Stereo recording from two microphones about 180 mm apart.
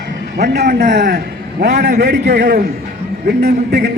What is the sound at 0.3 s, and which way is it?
A man's voice, 65° right (ahead or behind).